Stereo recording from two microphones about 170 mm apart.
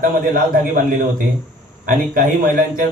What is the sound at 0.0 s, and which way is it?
A man's voice, 55° right (ahead or behind).